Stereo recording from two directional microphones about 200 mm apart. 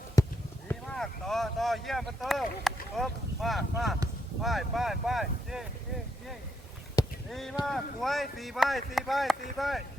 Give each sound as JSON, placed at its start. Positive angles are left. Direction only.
{"t": 0.2, "sound": "a sound", "side_deg": 15}
{"t": 0.7, "sound": "speech", "side_deg": 5}
{"t": 7.3, "sound": "speech", "side_deg": 0}